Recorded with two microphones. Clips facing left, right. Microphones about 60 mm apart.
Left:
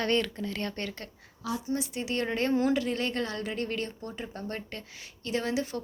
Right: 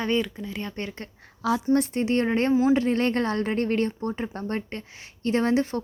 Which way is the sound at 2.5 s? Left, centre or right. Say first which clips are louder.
Right 5 dB; centre.